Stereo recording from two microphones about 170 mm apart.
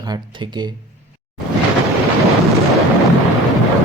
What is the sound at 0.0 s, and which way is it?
Speech, 25° right (ahead or behind).